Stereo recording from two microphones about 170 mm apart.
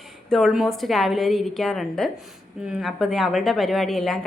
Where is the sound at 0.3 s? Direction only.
Centre (ahead or behind).